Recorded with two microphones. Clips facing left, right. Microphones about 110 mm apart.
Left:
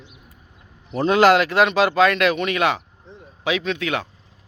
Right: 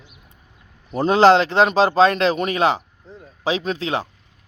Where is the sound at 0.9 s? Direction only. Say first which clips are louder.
Right 2 dB; 30° right (ahead or behind).